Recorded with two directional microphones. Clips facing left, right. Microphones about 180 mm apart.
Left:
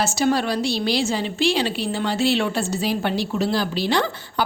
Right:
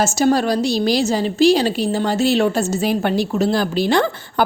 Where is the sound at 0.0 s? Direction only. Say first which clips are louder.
Right 4 dB; 45° right (ahead or behind).